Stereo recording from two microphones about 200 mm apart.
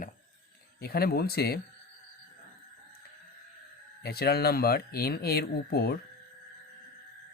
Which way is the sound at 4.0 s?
50° left (ahead or behind).